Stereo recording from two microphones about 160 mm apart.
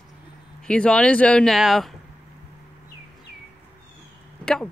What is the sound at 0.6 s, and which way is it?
Speech, 5° left (ahead or behind).